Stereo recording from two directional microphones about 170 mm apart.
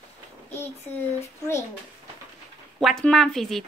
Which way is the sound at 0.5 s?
10° left (ahead or behind).